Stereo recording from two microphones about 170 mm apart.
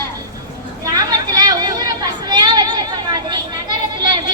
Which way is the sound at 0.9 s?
20° right (ahead or behind).